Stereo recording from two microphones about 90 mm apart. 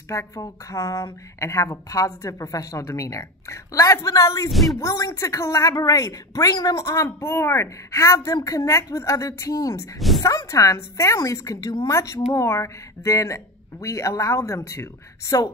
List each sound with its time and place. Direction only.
0.1 s speech: 35° left (ahead or behind)
4.5 s speech: centre (ahead or behind)
4.7 s speech: 35° left (ahead or behind)
9.9 s a sound: centre (ahead or behind)
10.2 s speech: 35° left (ahead or behind)